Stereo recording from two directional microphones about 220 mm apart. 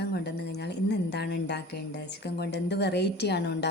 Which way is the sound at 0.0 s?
50° left (ahead or behind).